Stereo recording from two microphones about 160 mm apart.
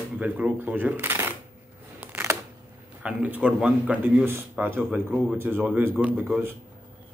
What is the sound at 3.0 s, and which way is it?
Speech, 10° right (ahead or behind).